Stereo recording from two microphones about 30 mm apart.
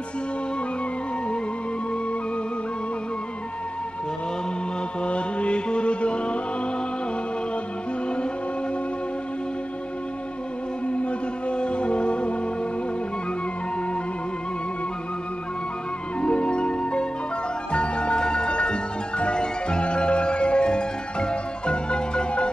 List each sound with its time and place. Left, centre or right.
5.0 s music: left
10.9 s music: left
16.2 s music: left